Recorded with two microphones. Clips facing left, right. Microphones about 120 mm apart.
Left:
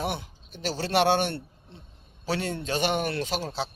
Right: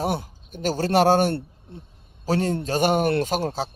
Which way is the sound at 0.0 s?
45° right (ahead or behind).